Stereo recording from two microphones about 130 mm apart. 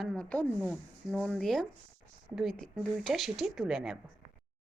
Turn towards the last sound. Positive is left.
turn(degrees=-5)  # may be behind; listen again after turning